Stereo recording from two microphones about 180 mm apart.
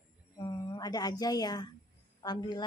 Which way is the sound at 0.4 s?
20° left (ahead or behind).